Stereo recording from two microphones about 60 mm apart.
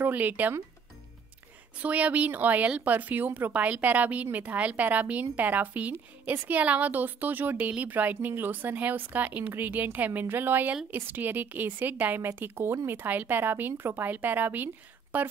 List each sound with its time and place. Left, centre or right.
0.0 s a woman's voice: right
1.8 s a woman's voice: right